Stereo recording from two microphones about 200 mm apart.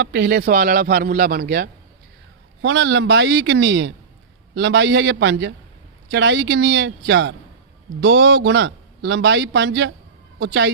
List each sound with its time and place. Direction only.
0.0 s a man's voice: 55° right (ahead or behind)
2.6 s a man's voice: 70° right (ahead or behind)